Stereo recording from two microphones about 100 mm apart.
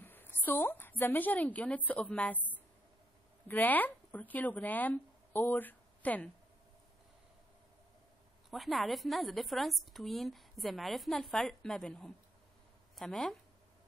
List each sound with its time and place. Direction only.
0.0 s a woman's voice: 20° left (ahead or behind)
3.4 s speech: 15° left (ahead or behind)
8.5 s a woman's voice: centre (ahead or behind)